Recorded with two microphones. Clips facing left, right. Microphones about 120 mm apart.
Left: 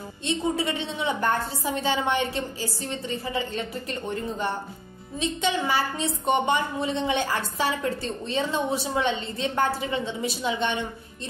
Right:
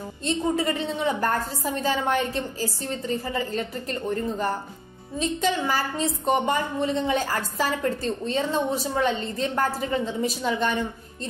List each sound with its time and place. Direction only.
0.2 s a woman's voice: 40° right (ahead or behind)